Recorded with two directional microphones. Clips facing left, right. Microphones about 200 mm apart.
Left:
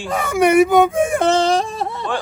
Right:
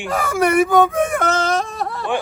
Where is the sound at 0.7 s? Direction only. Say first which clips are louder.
Left 1 dB; 25° left (ahead or behind).